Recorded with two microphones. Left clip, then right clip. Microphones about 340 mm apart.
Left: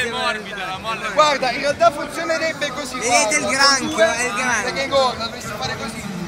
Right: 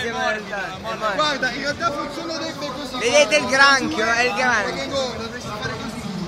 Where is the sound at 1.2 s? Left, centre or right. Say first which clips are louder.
Left 9 dB; centre.